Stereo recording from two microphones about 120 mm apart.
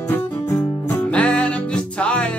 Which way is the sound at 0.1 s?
20° left (ahead or behind).